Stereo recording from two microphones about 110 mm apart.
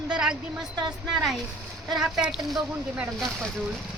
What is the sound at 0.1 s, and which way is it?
A woman's voice, 5° right (ahead or behind).